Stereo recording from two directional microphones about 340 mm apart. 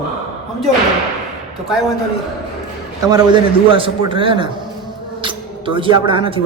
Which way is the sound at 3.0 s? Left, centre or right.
Centre.